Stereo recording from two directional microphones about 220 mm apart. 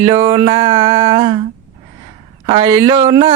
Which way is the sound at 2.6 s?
15° right (ahead or behind).